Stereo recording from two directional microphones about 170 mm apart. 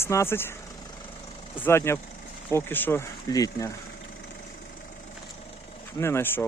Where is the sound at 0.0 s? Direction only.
15° left (ahead or behind).